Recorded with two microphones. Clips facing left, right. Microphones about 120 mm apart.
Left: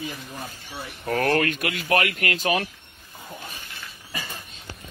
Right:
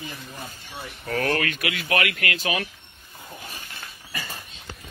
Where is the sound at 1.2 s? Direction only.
45° left (ahead or behind).